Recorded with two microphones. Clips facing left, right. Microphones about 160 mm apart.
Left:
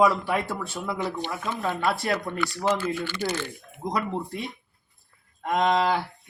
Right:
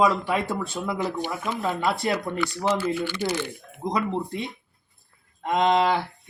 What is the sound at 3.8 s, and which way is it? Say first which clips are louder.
Speech: right 2 dB; centre (ahead or behind).